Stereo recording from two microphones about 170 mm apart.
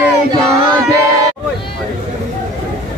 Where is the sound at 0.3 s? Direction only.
20° right (ahead or behind).